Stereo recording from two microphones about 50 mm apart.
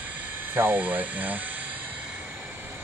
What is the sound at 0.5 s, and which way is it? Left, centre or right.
Speech, right.